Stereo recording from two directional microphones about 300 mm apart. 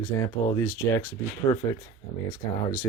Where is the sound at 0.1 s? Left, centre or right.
Centre.